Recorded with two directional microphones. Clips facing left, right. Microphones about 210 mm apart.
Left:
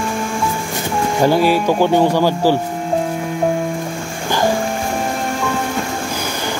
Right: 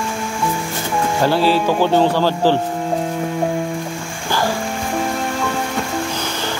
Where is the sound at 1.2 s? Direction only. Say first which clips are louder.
Left 2 dB; 15° left (ahead or behind).